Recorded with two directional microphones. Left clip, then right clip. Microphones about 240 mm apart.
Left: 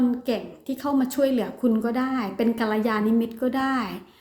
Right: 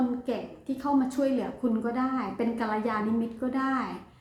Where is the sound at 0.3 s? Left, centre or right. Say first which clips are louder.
Left 5 dB; left.